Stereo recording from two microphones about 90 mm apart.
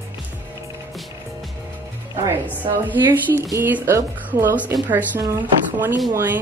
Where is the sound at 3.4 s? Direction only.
30° right (ahead or behind).